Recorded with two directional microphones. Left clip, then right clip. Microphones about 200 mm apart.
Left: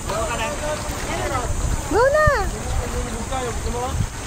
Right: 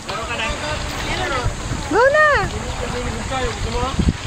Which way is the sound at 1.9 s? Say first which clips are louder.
Right 3 dB; 20° right (ahead or behind).